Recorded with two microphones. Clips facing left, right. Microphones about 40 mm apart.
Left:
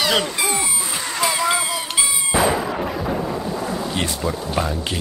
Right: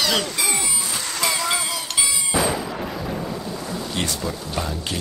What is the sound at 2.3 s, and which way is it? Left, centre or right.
Artillery fire, left.